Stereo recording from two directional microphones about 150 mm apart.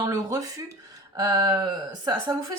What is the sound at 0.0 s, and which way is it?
Speech, 20° right (ahead or behind).